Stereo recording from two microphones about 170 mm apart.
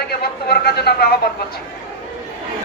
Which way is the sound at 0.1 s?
65° left (ahead or behind).